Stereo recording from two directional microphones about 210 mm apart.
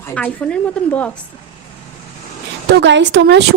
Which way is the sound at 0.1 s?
5° left (ahead or behind).